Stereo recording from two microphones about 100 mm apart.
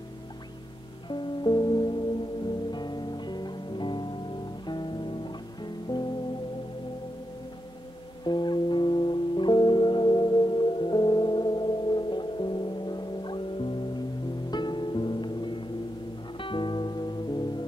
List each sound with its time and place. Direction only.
1.0 s music: 50° left (ahead or behind)
8.3 s music: 50° left (ahead or behind)